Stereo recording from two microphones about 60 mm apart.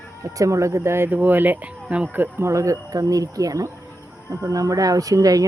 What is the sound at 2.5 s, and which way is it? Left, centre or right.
Speech, right.